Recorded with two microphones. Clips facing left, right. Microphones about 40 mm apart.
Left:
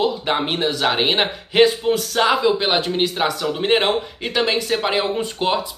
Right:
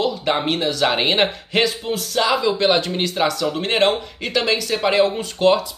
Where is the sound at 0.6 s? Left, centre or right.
Left.